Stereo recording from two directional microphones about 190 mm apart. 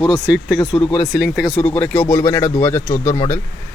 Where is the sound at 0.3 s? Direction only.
5° right (ahead or behind).